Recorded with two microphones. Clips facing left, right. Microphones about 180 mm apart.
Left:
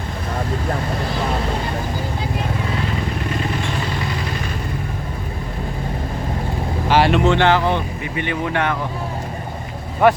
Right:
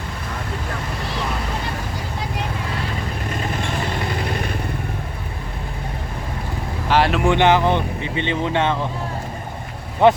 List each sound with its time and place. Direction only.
4.2 s vehicle: 55° right (ahead or behind)
6.8 s vehicle: centre (ahead or behind)
7.3 s speech: 20° right (ahead or behind)
10.0 s speech: 20° right (ahead or behind)